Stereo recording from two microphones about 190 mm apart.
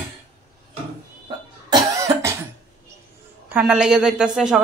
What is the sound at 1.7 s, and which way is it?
Cough, 15° right (ahead or behind).